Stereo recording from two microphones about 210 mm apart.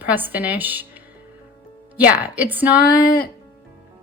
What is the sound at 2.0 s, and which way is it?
Speech, 5° right (ahead or behind).